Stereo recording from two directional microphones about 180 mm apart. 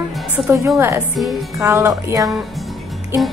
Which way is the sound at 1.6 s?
15° right (ahead or behind).